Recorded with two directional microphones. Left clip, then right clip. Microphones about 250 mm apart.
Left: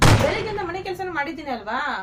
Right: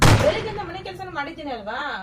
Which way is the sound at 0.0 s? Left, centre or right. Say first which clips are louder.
Right 1 dB; centre.